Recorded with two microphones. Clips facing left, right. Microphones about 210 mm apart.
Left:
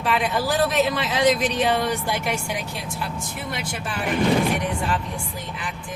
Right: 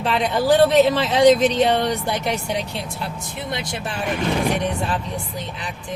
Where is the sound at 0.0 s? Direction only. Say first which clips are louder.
Right 3 dB; 30° right (ahead or behind).